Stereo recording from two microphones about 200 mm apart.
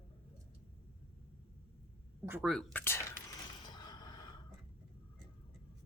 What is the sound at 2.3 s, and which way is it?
Speech, 5° right (ahead or behind).